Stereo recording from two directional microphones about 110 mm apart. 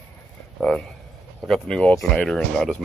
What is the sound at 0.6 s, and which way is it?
Speech, 5° left (ahead or behind).